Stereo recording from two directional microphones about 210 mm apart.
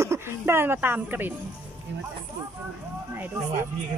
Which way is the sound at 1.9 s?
55° right (ahead or behind).